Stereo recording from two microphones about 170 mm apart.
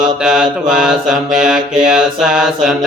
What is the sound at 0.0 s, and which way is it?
Mantra, 5° right (ahead or behind).